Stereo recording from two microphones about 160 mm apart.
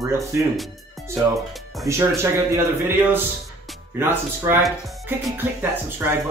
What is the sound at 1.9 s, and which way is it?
Speech, 15° right (ahead or behind).